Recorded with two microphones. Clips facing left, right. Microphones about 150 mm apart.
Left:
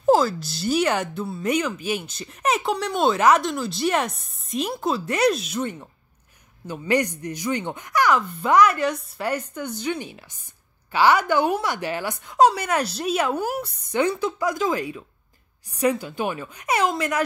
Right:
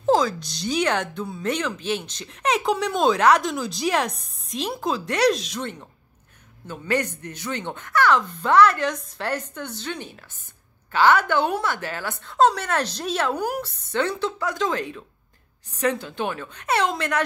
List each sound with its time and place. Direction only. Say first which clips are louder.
0.0 s speech: left 2 dB; 5° left (ahead or behind)